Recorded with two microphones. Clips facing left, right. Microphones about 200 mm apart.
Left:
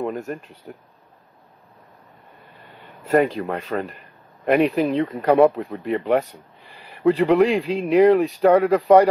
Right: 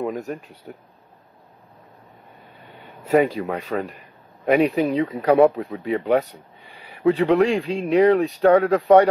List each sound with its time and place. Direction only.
0.0 s speech: centre (ahead or behind)
3.1 s speech: 5° right (ahead or behind)